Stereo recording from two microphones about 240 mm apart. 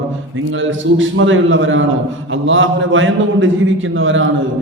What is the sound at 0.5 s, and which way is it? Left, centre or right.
A man's voice, right.